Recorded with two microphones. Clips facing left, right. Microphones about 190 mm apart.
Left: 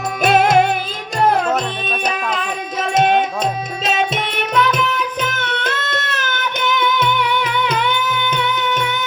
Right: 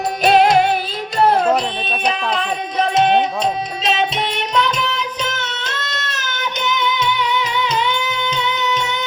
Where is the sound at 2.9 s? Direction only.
50° left (ahead or behind).